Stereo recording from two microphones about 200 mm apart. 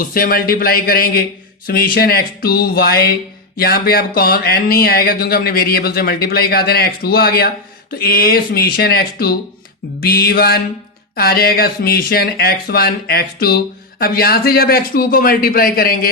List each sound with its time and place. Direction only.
0.0 s speech: 45° left (ahead or behind)